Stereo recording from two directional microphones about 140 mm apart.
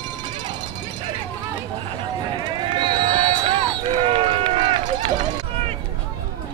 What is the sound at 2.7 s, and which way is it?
Run, 35° right (ahead or behind).